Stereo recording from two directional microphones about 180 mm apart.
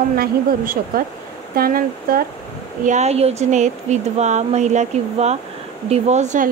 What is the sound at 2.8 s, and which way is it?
Speech, 40° right (ahead or behind).